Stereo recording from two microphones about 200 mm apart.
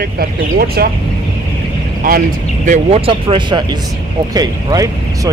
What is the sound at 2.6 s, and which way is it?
Speech, 35° right (ahead or behind).